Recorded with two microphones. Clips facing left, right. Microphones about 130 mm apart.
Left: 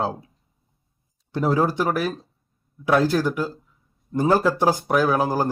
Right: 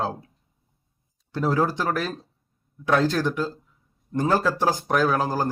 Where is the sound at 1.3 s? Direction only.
15° left (ahead or behind).